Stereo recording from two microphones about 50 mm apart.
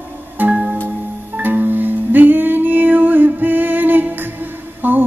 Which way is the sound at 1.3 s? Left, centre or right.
Right.